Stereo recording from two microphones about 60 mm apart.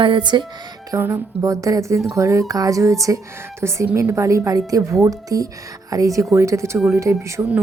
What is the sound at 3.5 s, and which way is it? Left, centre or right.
A woman's voice, right.